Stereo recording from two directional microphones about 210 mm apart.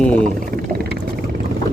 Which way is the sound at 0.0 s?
5° left (ahead or behind).